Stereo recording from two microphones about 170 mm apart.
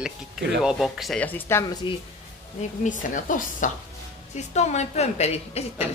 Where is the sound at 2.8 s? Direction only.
50° left (ahead or behind).